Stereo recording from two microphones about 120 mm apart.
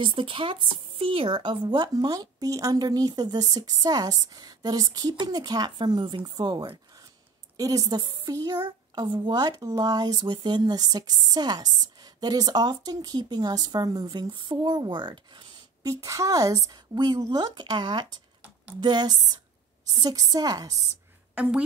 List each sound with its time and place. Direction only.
0.0 s speech: 45° right (ahead or behind)
15.9 s speech: 30° right (ahead or behind)
21.4 s speech: 10° right (ahead or behind)